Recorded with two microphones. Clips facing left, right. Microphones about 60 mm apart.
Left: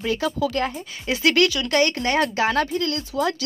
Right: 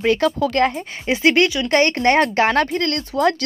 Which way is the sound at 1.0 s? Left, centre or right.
Right.